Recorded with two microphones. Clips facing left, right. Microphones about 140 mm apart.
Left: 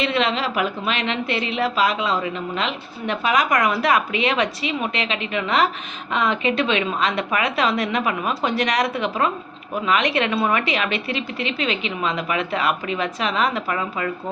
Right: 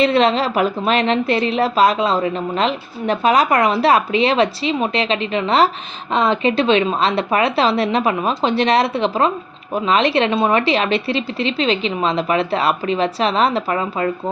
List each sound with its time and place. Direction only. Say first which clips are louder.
0.0 s a woman's voice: right 7 dB; 35° right (ahead or behind)